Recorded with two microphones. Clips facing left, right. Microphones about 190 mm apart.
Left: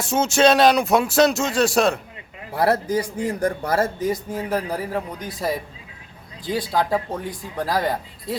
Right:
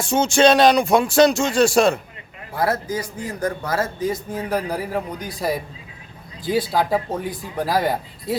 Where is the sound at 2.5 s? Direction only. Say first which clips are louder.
Left 3 dB; 35° left (ahead or behind).